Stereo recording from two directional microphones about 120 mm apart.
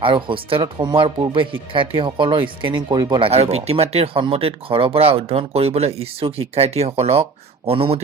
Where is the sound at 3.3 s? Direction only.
60° right (ahead or behind).